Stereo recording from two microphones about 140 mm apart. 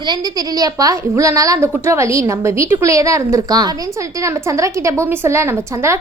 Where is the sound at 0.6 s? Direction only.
25° right (ahead or behind).